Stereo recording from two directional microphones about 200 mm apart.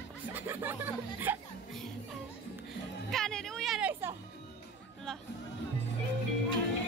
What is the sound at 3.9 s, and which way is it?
Speech, 10° right (ahead or behind).